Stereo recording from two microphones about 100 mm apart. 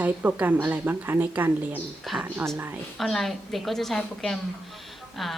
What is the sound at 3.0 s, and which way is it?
A woman's voice, centre (ahead or behind).